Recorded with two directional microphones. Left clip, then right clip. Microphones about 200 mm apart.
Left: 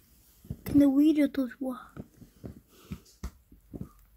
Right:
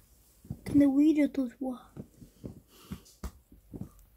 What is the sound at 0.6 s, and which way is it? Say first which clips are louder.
Speech: left 1 dB; 25° left (ahead or behind).